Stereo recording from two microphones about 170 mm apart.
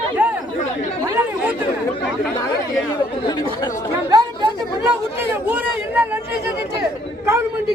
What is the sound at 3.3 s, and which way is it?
Chatter, 25° left (ahead or behind).